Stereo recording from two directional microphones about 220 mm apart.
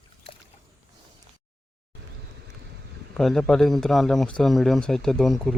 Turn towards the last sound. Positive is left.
turn(degrees=0)  # may be behind; listen again after turning